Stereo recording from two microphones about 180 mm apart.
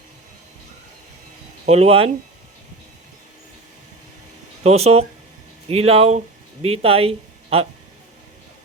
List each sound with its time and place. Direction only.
1.6 s speech: 35° right (ahead or behind)
4.6 s speech: 35° right (ahead or behind)